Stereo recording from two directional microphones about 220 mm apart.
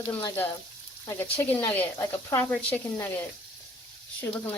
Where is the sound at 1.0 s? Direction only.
10° left (ahead or behind).